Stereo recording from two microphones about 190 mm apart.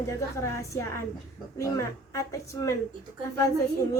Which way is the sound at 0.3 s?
15° left (ahead or behind).